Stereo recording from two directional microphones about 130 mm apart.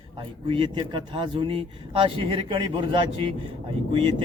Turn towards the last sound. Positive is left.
turn(degrees=-40)  # may be behind; listen again after turning